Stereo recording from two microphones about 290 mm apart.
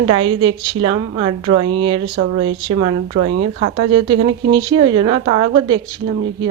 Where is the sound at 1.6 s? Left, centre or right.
Centre.